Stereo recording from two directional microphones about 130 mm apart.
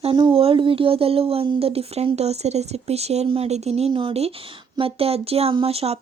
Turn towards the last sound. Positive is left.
turn(degrees=-50)  # may be behind; listen again after turning